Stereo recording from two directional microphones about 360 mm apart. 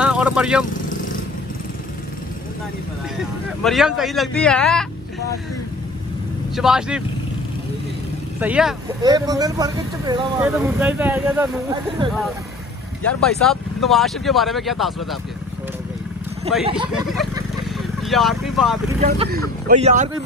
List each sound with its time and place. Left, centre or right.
0.0 s speech: centre
0.7 s vehicle: left
3.6 s speech: centre
6.5 s speech: centre
8.4 s speech: centre
13.0 s speech: centre
16.5 s speech: centre
16.9 s vehicle: centre
18.9 s speech: right